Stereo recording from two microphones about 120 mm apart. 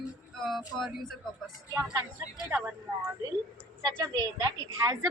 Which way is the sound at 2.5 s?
15° right (ahead or behind).